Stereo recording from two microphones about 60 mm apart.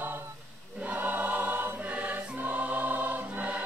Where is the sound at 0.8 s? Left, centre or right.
Right.